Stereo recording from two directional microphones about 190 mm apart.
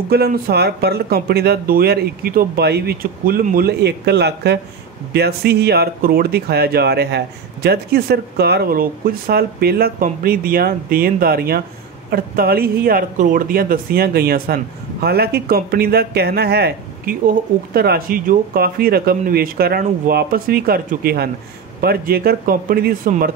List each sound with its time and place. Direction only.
0.1 s speech: 55° right (ahead or behind)